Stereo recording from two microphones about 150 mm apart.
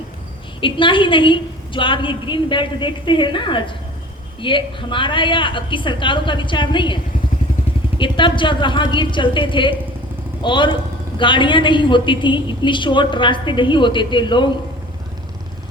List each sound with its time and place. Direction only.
0.6 s a woman's voice: 35° left (ahead or behind)